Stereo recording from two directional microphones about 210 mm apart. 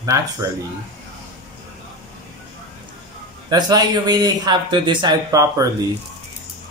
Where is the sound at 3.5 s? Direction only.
20° right (ahead or behind).